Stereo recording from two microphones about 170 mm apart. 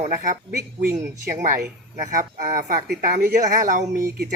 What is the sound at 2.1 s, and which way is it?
Speech, 50° right (ahead or behind).